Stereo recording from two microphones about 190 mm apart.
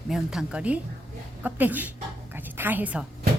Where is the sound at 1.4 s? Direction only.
10° right (ahead or behind).